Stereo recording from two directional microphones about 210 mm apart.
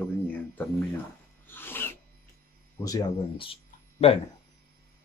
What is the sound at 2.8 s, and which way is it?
Speech, 15° left (ahead or behind).